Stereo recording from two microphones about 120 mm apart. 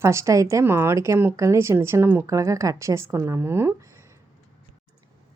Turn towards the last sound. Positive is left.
turn(degrees=-20)  # may be behind; listen again after turning